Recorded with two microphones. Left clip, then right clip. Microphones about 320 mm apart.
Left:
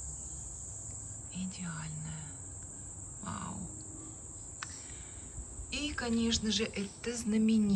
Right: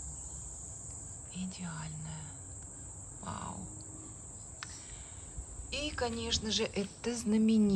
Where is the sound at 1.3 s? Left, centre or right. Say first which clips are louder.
Left 1 dB; centre.